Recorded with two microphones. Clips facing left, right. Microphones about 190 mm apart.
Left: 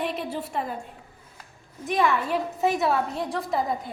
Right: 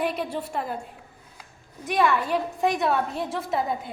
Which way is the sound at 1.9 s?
Centre (ahead or behind).